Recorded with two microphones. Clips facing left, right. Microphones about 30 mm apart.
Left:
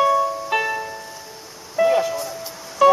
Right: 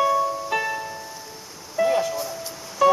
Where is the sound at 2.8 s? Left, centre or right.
Left.